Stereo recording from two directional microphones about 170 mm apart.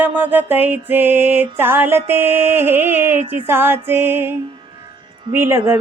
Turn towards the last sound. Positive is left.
turn(degrees=-15)  # may be behind; listen again after turning